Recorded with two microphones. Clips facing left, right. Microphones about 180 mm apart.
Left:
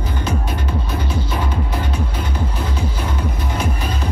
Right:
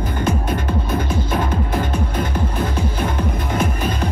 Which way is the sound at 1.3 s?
50° right (ahead or behind).